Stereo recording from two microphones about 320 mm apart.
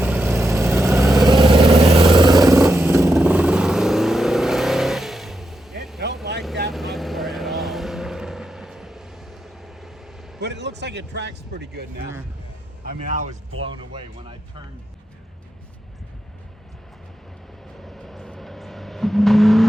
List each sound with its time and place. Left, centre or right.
0.0 s vehicle: centre
1.2 s vehicle: centre
10.4 s a sound: right
12.8 s speech: right
17.8 s vehicle: centre